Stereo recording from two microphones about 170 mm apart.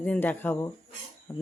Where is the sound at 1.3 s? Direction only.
15° left (ahead or behind).